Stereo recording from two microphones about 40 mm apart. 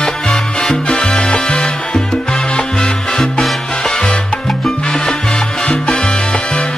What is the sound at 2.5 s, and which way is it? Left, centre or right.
Music, left.